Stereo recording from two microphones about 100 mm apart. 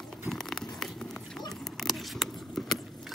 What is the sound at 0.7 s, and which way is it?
Run, 5° left (ahead or behind).